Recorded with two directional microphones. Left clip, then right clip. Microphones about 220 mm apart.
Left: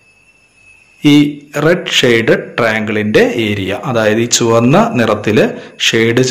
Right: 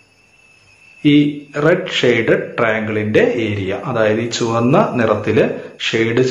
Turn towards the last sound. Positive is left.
turn(degrees=45)  # may be behind; listen again after turning